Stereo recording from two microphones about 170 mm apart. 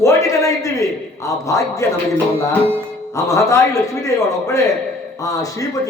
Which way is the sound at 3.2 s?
20° left (ahead or behind).